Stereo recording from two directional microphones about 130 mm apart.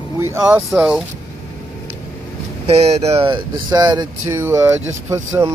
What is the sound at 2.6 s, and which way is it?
Speech, 50° right (ahead or behind).